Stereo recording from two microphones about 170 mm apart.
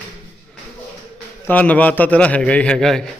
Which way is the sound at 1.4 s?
10° left (ahead or behind).